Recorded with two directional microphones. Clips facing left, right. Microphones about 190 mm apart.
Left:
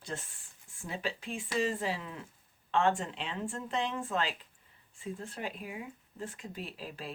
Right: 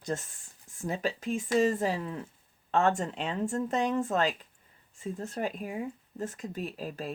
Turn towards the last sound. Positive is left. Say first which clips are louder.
# right 6 dB
turn(degrees=-45)  # may be behind; listen again after turning